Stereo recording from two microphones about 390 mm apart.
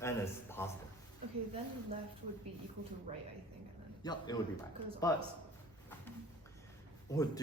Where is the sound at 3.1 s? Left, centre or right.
Centre.